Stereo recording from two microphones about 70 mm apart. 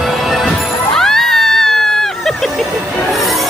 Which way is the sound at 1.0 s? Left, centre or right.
Centre.